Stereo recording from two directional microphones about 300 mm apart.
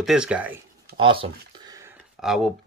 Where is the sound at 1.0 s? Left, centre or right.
Centre.